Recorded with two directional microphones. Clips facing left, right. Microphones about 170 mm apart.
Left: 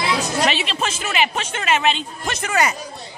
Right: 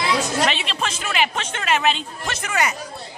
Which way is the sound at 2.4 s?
35° left (ahead or behind).